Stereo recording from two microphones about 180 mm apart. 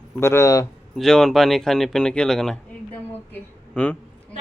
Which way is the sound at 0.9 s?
Centre (ahead or behind).